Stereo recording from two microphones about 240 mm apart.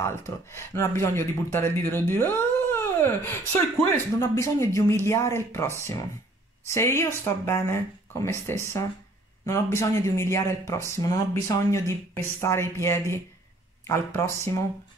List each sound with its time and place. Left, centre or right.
0.0 s speech: centre
6.7 s speech: centre